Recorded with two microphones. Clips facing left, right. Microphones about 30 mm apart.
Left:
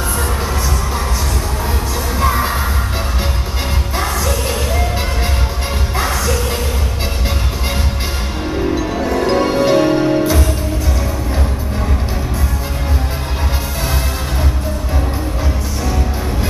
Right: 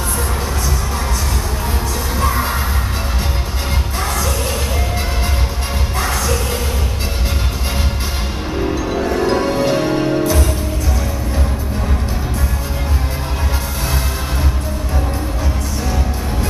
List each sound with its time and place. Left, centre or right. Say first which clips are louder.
2.1 s music: left 3 dB; centre
5.9 s music: left 1 dB; centre
8.7 s music: left 1 dB; centre
9.2 s music: left 3 dB; centre